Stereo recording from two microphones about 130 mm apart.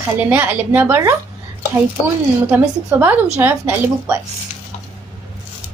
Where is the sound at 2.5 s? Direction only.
15° right (ahead or behind).